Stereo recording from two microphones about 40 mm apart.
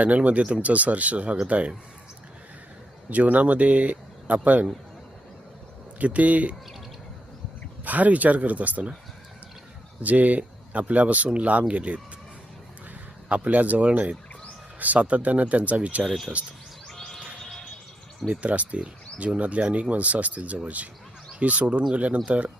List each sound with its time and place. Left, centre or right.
0.0 s speech: right
3.1 s speech: right
6.0 s speech: right
7.9 s speech: right
10.0 s speech: right
13.2 s speech: right
16.9 s bird: centre
18.3 s speech: right